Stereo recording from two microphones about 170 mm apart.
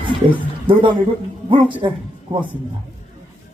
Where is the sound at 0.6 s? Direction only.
30° right (ahead or behind).